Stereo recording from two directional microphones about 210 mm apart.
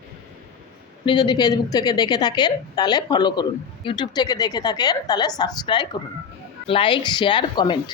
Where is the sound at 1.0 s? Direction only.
20° left (ahead or behind).